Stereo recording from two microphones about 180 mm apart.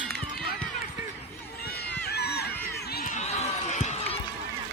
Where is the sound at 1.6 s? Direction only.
60° left (ahead or behind).